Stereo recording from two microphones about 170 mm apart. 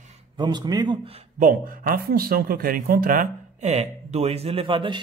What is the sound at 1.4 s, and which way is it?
Speech, 55° right (ahead or behind).